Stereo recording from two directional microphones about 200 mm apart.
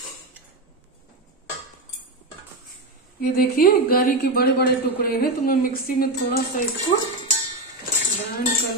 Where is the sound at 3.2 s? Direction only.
50° left (ahead or behind).